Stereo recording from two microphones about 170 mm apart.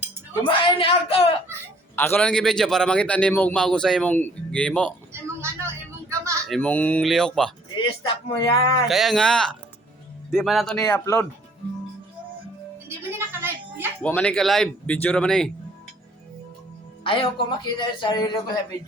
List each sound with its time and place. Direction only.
0.4 s speech: 30° left (ahead or behind)
2.0 s a man's voice: 10° left (ahead or behind)
5.4 s vehicle: 15° right (ahead or behind)
6.5 s a man's voice: 10° left (ahead or behind)
7.9 s a man's voice: 30° left (ahead or behind)
8.9 s a man's voice: centre (ahead or behind)
10.8 s a man's voice: 20° left (ahead or behind)
13.1 s a sound: 15° right (ahead or behind)
14.0 s a man's voice: 5° left (ahead or behind)
17.0 s a man's voice: 30° left (ahead or behind)